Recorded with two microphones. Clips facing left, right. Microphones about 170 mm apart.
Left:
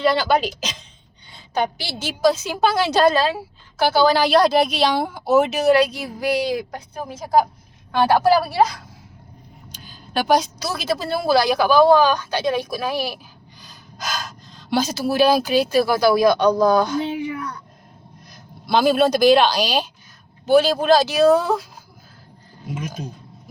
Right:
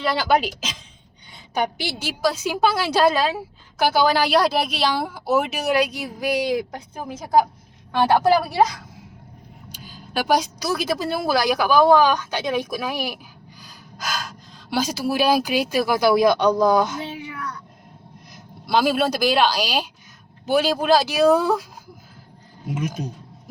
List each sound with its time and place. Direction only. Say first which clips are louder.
0.0 s a woman's voice: left 2 dB; 5° right (ahead or behind)
8.3 s a woman's voice: left 1 dB; 15° right (ahead or behind)
9.7 s a woman's voice: left 2 dB; 10° right (ahead or behind)
18.6 s a woman's voice: left 3 dB; 5° right (ahead or behind)